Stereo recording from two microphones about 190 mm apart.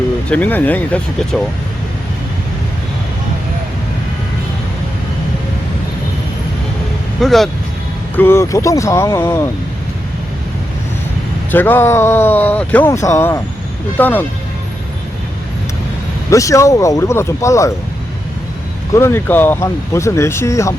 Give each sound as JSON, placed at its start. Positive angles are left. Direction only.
{"t": 0.3, "sound": "speech", "side_deg": 10}
{"t": 7.2, "sound": "speech", "side_deg": 0}
{"t": 8.1, "sound": "speech", "side_deg": 10}
{"t": 11.5, "sound": "speech", "side_deg": 10}
{"t": 16.3, "sound": "speech", "side_deg": 15}
{"t": 18.9, "sound": "speech", "side_deg": 15}